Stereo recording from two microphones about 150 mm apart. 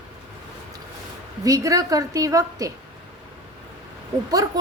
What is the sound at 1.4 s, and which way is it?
A woman's voice, 20° right (ahead or behind).